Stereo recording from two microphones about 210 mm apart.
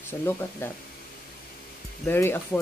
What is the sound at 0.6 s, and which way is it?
Speech, 10° left (ahead or behind).